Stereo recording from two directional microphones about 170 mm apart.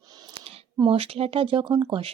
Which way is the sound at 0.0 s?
25° right (ahead or behind).